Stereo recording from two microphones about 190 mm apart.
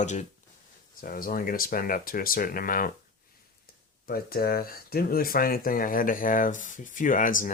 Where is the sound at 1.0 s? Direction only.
50° left (ahead or behind).